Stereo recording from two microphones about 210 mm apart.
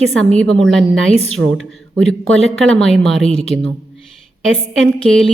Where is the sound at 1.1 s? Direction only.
30° left (ahead or behind).